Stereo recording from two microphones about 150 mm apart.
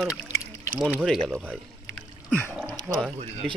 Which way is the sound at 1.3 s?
10° right (ahead or behind).